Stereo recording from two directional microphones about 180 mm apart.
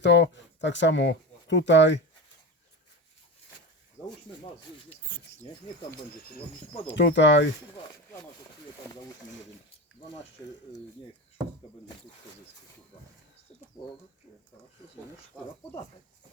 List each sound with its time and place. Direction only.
0.0 s speech: 80° left
5.0 s a sound: 10° left (ahead or behind)
6.8 s speech: 80° left